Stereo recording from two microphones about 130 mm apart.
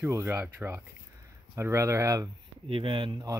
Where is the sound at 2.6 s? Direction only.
45° right (ahead or behind).